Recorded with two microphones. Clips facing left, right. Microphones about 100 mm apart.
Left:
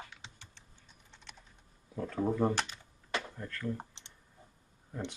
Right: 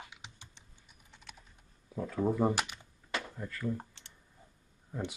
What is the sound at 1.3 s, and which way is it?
Typing, 5° right (ahead or behind).